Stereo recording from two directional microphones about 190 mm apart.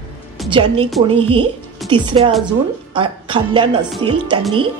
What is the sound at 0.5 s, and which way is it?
Speech, 30° right (ahead or behind).